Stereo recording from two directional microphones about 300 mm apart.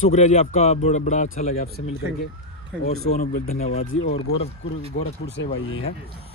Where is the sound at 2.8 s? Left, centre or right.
Left.